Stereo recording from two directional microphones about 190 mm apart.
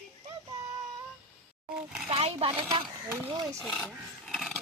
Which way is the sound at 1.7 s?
5° right (ahead or behind).